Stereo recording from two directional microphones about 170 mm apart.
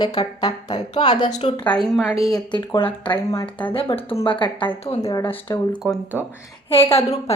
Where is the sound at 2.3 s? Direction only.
25° left (ahead or behind).